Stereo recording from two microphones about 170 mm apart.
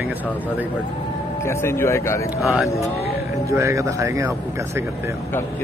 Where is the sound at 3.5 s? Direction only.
15° right (ahead or behind).